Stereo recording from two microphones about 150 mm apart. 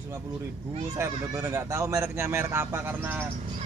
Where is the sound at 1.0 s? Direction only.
20° right (ahead or behind).